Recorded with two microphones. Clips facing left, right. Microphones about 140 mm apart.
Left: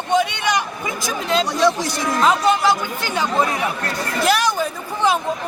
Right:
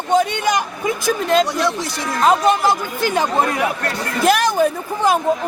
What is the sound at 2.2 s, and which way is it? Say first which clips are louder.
Speech: right 2 dB; 45° right (ahead or behind).